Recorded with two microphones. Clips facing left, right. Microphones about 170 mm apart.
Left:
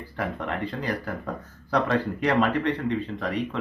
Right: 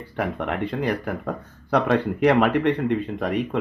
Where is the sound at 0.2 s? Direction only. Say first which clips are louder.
Right 4 dB; 60° right (ahead or behind).